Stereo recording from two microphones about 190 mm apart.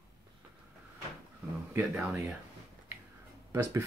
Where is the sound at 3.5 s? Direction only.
15° right (ahead or behind).